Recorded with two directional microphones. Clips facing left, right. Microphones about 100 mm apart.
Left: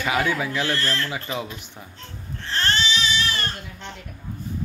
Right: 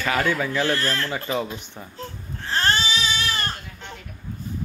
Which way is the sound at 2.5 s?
35° right (ahead or behind).